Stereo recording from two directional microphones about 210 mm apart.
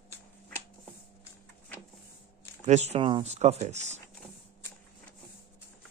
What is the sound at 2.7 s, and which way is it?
Speech, 30° right (ahead or behind).